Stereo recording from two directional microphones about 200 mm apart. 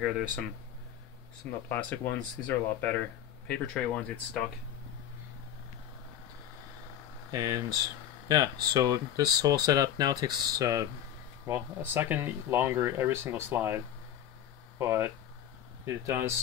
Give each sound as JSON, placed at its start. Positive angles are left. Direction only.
{"t": 1.7, "sound": "speech", "side_deg": 5}
{"t": 7.2, "sound": "speech", "side_deg": -15}
{"t": 14.8, "sound": "speech", "side_deg": -10}